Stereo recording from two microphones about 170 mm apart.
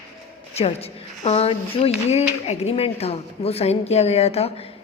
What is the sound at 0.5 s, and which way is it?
A woman's voice, 35° left (ahead or behind).